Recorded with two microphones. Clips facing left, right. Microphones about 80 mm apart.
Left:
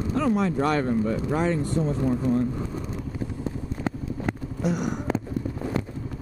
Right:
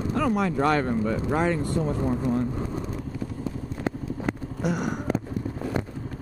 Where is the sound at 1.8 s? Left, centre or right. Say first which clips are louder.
Left 1 dB; centre.